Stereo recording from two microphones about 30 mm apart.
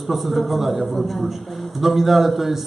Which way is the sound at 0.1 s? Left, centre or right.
Centre.